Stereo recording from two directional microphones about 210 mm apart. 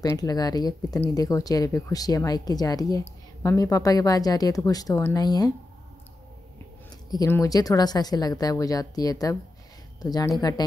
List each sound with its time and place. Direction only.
0.0 s speech: 15° left (ahead or behind)
7.1 s speech: 15° left (ahead or behind)